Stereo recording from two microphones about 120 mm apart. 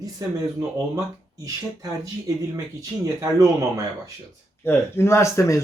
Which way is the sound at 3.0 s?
25° right (ahead or behind).